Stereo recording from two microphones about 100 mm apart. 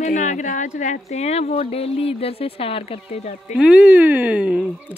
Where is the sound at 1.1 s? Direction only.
90° left.